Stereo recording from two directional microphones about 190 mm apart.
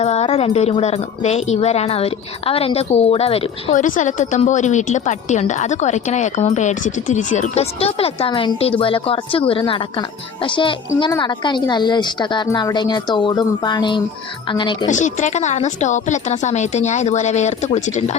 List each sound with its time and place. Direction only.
0.0 s a woman's voice: 35° left (ahead or behind)
14.8 s speech: 40° left (ahead or behind)